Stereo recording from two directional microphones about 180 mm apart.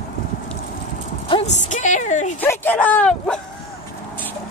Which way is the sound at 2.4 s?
10° left (ahead or behind).